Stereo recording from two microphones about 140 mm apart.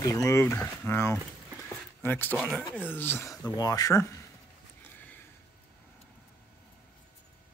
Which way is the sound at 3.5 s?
25° left (ahead or behind).